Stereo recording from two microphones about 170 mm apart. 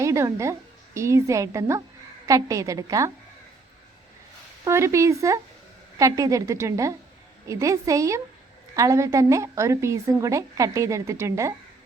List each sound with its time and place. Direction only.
0.0 s a woman's voice: 20° right (ahead or behind)
4.6 s a woman's voice: 15° right (ahead or behind)